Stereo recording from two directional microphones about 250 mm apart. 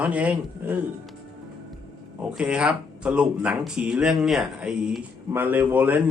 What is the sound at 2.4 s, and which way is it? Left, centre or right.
Speech, centre.